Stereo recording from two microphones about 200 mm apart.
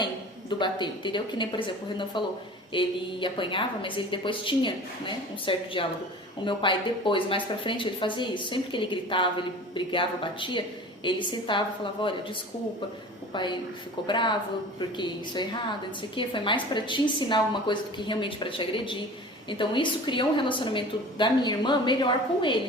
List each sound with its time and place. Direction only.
0.6 s a woman's voice: 25° left (ahead or behind)
13.3 s a woman's voice: 25° left (ahead or behind)